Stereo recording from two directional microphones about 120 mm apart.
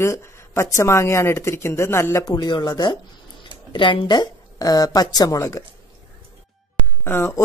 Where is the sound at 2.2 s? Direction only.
35° left (ahead or behind).